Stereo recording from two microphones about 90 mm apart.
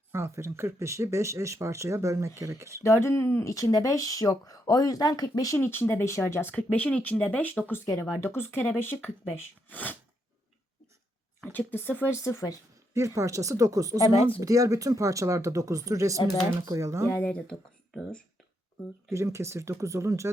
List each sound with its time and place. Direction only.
0.1 s speech: 30° right (ahead or behind)
2.8 s speech: 30° left (ahead or behind)
5.6 s speech: 25° left (ahead or behind)
6.5 s speech: 15° left (ahead or behind)
11.5 s speech: 20° left (ahead or behind)
12.9 s speech: 35° right (ahead or behind)
14.1 s speech: 90° left
14.4 s speech: 40° right (ahead or behind)
17.1 s speech: 15° left (ahead or behind)
19.1 s speech: 30° right (ahead or behind)